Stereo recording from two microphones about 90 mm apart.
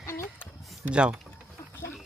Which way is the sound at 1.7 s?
30° left (ahead or behind).